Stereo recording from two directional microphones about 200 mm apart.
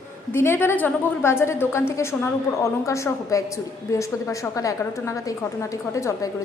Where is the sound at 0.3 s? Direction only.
10° left (ahead or behind).